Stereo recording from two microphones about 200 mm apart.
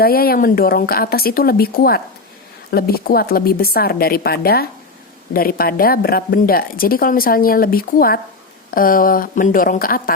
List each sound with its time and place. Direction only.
0.0 s a woman's voice: 50° left (ahead or behind)